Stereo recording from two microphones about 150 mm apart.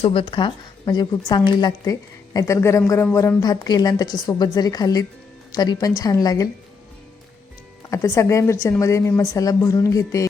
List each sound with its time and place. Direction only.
0.0 s speech: 35° left (ahead or behind)
7.9 s speech: 20° left (ahead or behind)